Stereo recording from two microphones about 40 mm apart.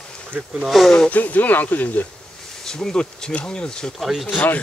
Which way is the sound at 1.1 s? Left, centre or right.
Left.